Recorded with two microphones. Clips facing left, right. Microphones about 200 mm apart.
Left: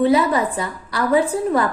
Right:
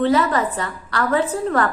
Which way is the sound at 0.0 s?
10° left (ahead or behind).